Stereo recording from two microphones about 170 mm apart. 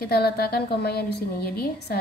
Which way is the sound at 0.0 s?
65° left (ahead or behind).